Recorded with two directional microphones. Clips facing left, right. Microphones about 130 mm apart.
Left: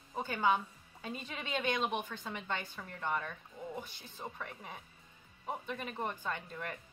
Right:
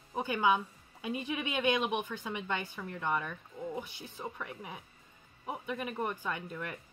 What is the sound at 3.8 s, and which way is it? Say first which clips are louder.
Speech: right 4 dB; 10° right (ahead or behind).